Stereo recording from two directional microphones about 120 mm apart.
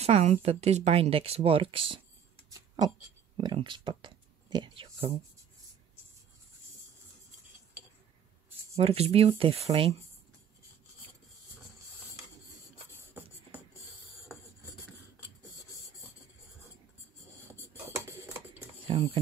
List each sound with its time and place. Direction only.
0.0 s speech: 65° right (ahead or behind); by 2.0 s 45° right (ahead or behind)
3.3 s speech: 45° right (ahead or behind)
8.7 s speech: 55° right (ahead or behind)
17.6 s tick-tock: 20° right (ahead or behind)
18.9 s speech: 50° right (ahead or behind)